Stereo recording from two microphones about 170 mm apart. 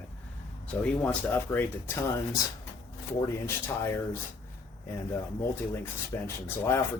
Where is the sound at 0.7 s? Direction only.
10° left (ahead or behind).